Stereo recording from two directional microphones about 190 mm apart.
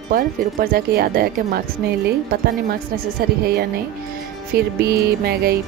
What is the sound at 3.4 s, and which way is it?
Music, 60° right (ahead or behind).